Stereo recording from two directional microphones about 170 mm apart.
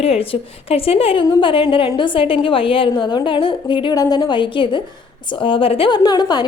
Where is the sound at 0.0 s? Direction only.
35° left (ahead or behind).